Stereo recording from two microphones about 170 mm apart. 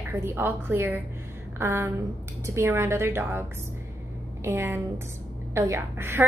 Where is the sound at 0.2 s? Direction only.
10° right (ahead or behind).